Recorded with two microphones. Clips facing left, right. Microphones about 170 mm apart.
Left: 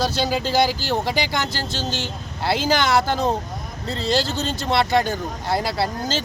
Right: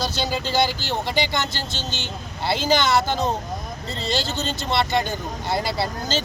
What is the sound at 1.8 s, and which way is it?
Speech, 35° left (ahead or behind).